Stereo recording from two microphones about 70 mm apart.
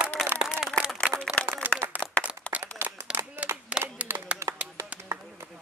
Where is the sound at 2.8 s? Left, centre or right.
Right.